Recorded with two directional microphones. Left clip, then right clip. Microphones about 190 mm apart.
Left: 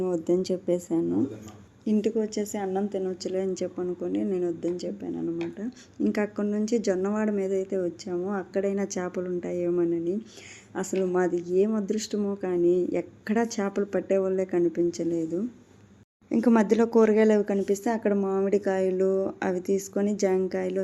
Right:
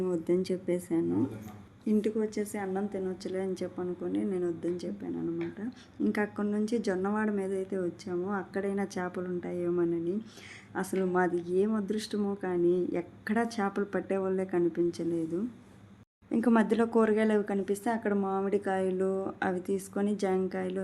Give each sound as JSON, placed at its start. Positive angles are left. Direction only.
{"t": 0.0, "sound": "a woman's voice", "side_deg": 15}
{"t": 16.3, "sound": "a woman's voice", "side_deg": 15}